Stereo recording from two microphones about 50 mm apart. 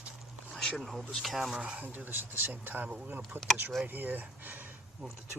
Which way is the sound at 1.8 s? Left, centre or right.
Right.